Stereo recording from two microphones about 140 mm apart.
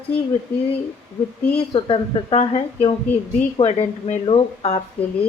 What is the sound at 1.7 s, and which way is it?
A woman's voice, 45° left (ahead or behind).